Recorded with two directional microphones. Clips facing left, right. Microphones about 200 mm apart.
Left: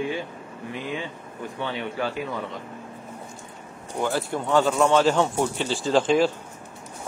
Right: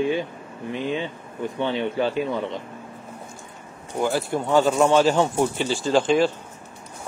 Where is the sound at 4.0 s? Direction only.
10° right (ahead or behind).